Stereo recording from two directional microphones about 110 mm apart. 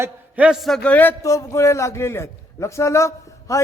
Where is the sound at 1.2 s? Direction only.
30° left (ahead or behind).